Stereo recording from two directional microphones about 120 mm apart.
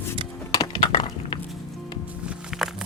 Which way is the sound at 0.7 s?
45° left (ahead or behind).